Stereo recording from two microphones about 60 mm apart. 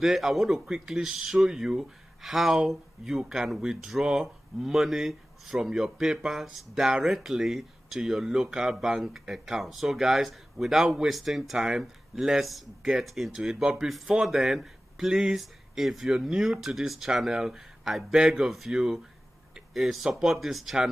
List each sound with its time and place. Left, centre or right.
0.0 s speech: centre